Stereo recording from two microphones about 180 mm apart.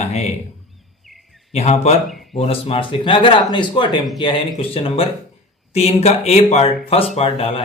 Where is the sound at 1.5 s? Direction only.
35° left (ahead or behind).